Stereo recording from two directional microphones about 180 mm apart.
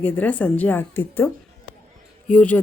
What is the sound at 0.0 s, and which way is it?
A woman's voice, 10° left (ahead or behind).